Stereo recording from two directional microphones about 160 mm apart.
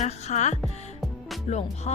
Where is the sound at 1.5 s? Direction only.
45° left (ahead or behind).